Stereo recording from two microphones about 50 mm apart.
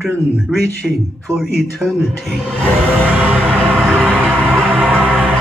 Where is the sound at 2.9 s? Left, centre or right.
Right.